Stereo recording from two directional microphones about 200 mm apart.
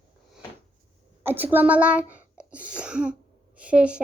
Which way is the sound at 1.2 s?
10° right (ahead or behind).